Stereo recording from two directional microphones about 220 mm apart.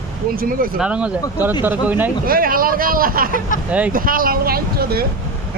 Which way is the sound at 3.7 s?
5° right (ahead or behind).